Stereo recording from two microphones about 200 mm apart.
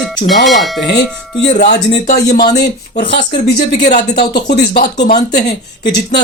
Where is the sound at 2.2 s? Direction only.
55° left (ahead or behind).